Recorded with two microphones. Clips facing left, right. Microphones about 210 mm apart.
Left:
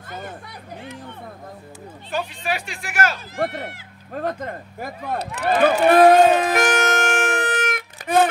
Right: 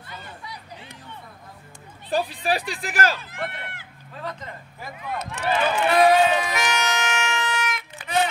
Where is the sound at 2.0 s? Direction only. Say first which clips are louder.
Right 2 dB; 35° right (ahead or behind).